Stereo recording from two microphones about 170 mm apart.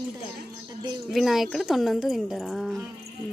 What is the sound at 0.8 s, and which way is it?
Speech, 25° right (ahead or behind).